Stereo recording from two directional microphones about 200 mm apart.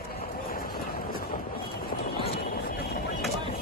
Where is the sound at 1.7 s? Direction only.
50° left (ahead or behind).